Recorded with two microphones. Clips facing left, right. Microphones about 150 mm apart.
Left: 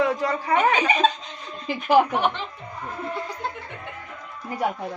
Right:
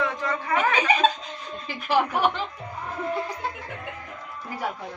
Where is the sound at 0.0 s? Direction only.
35° left (ahead or behind).